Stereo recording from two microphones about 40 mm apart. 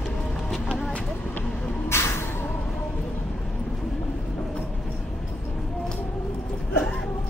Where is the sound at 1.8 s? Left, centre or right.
Left.